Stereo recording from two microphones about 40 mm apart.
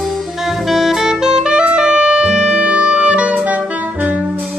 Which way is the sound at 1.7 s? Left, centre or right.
Right.